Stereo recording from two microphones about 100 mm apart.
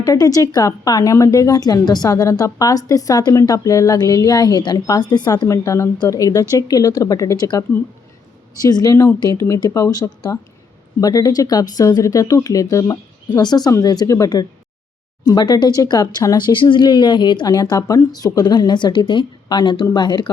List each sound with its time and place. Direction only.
0.0 s a woman's voice: 35° left (ahead or behind)
8.6 s a woman's voice: 40° left (ahead or behind)
16.5 s a woman's voice: 50° left (ahead or behind)